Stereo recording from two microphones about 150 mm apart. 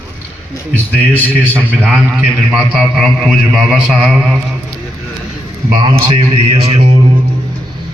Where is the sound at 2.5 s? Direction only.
Centre (ahead or behind).